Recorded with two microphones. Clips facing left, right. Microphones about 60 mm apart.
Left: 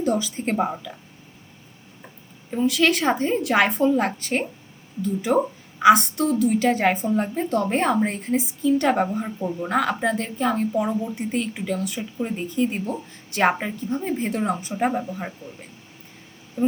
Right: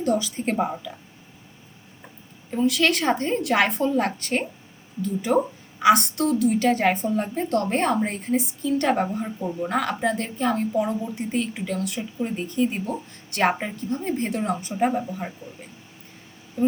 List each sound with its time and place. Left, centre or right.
0.0 s a woman's voice: centre
2.5 s a woman's voice: centre
10.8 s a woman's voice: centre
11.2 s a woman's voice: centre